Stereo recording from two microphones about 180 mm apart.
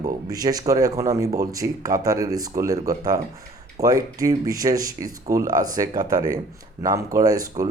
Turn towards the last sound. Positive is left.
turn(degrees=-20)  # may be behind; listen again after turning